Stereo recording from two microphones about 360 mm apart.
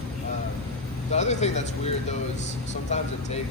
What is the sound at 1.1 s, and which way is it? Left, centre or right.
Speech, centre.